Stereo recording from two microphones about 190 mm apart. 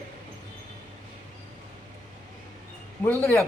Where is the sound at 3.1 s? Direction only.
10° left (ahead or behind).